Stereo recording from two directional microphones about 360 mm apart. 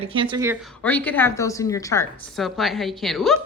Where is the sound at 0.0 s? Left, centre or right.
Centre.